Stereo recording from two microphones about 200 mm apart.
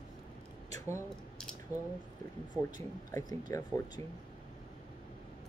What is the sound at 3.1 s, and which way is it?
Speech, 20° left (ahead or behind).